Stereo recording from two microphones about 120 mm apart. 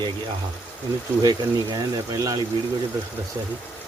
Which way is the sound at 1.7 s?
30° right (ahead or behind).